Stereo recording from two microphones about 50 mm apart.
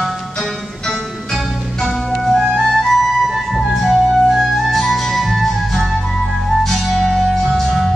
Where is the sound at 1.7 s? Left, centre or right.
Centre.